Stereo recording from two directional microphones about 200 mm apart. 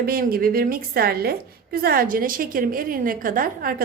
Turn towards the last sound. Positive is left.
turn(degrees=-45)  # may be behind; listen again after turning